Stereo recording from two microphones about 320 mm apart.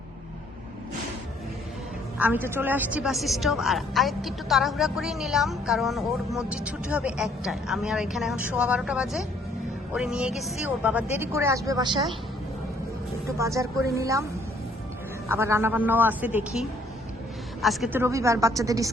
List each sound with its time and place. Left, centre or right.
2.1 s a woman's voice: centre
13.2 s speech: centre
15.3 s a woman's voice: centre